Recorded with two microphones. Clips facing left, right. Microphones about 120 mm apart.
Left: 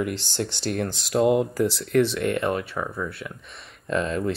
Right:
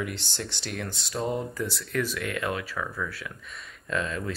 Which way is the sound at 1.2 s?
75° left (ahead or behind).